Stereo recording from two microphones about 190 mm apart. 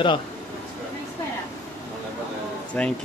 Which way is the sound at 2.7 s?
10° left (ahead or behind).